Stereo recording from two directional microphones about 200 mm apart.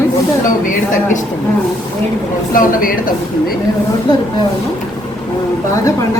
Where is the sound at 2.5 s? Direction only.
45° left (ahead or behind).